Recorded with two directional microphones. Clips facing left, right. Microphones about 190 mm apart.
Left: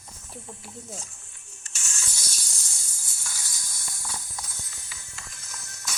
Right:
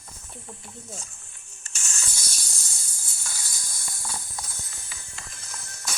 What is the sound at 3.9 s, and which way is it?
Music, 30° right (ahead or behind).